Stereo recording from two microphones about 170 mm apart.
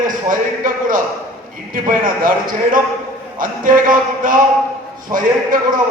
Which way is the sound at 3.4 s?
55° right (ahead or behind).